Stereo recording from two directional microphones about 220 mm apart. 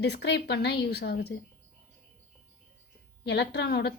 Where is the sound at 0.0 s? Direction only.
50° left (ahead or behind).